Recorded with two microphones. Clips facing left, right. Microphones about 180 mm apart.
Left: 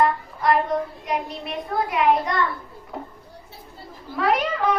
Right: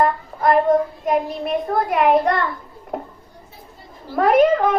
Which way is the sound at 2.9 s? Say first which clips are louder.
Right 6 dB; 50° right (ahead or behind).